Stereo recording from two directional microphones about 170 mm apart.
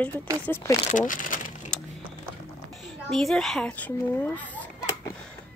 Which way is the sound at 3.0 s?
5° left (ahead or behind).